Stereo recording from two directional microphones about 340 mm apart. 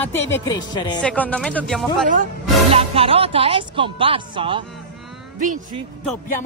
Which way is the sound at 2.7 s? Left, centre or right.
Centre.